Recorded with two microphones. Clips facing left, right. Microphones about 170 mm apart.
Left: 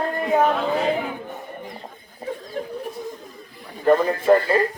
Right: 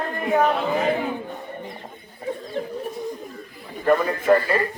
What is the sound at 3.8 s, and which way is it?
Speech, 20° left (ahead or behind).